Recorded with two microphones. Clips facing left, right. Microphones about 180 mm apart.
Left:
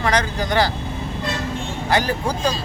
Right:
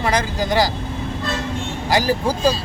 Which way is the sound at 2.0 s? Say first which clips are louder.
Right 4 dB; 5° right (ahead or behind).